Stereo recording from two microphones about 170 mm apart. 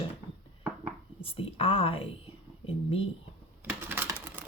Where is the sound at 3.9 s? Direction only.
10° right (ahead or behind).